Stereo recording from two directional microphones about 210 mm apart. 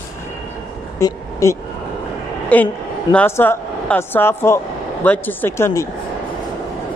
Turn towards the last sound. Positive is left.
turn(degrees=10)  # may be behind; listen again after turning